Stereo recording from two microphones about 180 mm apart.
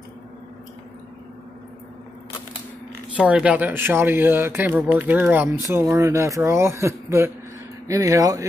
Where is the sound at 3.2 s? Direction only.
5° right (ahead or behind).